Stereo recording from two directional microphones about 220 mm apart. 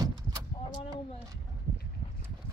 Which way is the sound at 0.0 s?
15° right (ahead or behind).